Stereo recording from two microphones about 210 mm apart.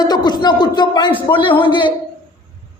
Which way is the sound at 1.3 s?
25° left (ahead or behind).